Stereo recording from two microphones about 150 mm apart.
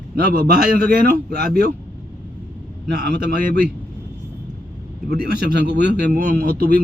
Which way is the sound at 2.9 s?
90° right.